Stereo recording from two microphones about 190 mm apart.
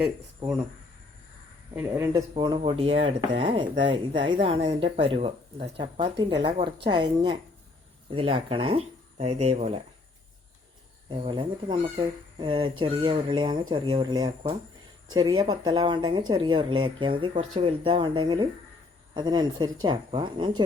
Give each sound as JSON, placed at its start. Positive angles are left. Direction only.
{"t": 0.0, "sound": "speech", "side_deg": -5}
{"t": 1.7, "sound": "speech", "side_deg": -10}
{"t": 11.1, "sound": "speech", "side_deg": -25}